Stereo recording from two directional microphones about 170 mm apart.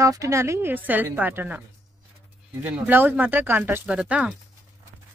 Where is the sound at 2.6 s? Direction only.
10° right (ahead or behind).